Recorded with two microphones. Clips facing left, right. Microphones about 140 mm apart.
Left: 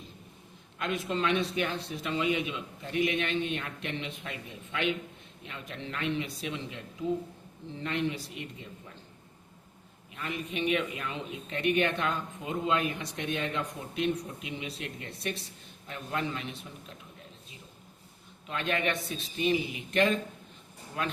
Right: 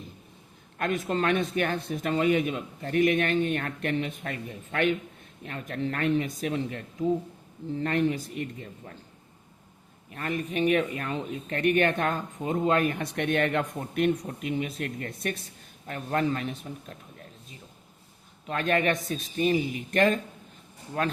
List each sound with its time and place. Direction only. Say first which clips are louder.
0.8 s speech: right 4 dB; 50° right (ahead or behind)
10.2 s speech: right 6 dB; 45° right (ahead or behind)
18.4 s speech: right 5 dB; 45° right (ahead or behind)